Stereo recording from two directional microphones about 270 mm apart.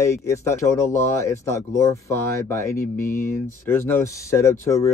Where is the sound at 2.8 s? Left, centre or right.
Left.